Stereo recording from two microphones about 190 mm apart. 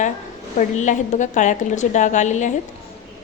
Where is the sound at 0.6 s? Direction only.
40° left (ahead or behind).